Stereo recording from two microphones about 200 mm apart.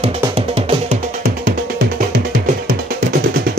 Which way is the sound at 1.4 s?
60° right (ahead or behind).